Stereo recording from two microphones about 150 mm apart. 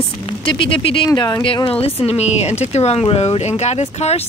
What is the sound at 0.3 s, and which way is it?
Speech, 35° left (ahead or behind).